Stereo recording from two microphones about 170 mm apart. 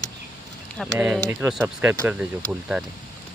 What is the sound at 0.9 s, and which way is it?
A woman's voice, 5° right (ahead or behind).